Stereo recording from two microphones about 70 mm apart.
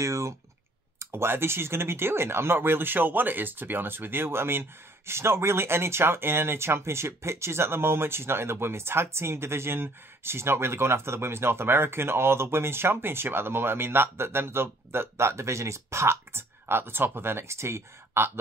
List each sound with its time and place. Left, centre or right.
0.0 s speech: right
0.9 s speech: right